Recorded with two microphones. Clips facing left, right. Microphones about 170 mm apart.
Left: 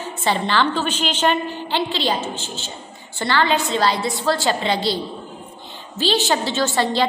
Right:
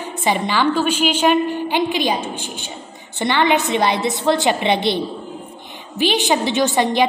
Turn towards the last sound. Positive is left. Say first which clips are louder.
# right 3 dB
turn(degrees=-15)  # may be behind; listen again after turning